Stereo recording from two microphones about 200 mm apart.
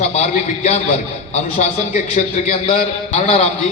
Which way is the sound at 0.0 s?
35° left (ahead or behind).